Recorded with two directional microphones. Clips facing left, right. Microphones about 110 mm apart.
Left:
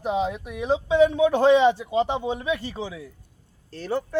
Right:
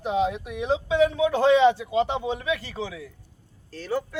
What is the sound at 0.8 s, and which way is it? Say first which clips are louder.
Speech: left 4 dB; 20° left (ahead or behind).